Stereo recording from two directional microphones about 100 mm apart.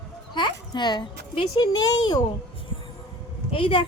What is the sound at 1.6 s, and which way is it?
Speech, 40° left (ahead or behind).